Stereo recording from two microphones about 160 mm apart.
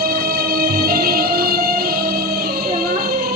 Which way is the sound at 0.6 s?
70° right (ahead or behind).